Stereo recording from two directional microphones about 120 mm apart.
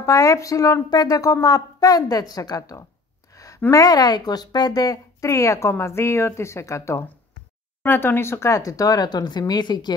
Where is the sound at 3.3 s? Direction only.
30° left (ahead or behind).